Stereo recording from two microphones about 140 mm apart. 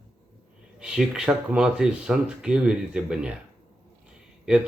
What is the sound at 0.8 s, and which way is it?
Speech, 5° right (ahead or behind).